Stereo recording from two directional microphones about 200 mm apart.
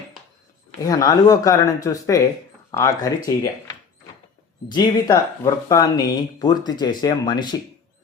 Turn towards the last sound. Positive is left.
turn(degrees=20)  # may be behind; listen again after turning